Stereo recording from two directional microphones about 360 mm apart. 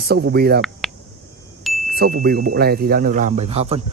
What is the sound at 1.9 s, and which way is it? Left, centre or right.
Speech, right.